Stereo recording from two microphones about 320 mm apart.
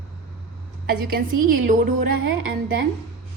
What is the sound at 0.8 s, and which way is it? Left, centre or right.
Speech, right.